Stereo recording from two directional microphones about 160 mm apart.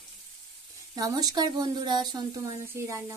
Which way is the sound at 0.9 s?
25° right (ahead or behind).